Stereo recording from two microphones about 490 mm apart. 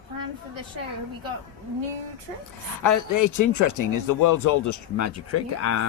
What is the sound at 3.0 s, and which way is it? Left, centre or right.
Speech, left.